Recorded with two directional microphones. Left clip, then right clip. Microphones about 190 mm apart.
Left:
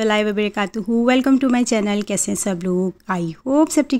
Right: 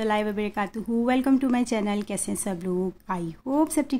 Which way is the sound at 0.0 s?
20° left (ahead or behind).